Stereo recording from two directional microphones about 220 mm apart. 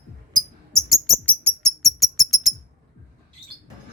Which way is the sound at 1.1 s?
Centre (ahead or behind).